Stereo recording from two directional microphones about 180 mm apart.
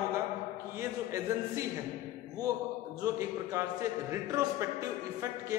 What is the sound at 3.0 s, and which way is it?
Speech, 15° right (ahead or behind).